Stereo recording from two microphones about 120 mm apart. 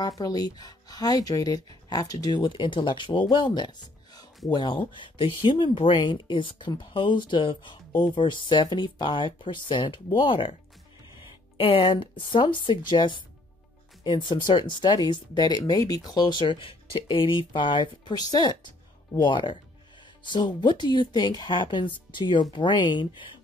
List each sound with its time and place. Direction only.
0.0 s speech: 30° left (ahead or behind)
11.5 s speech: 50° left (ahead or behind)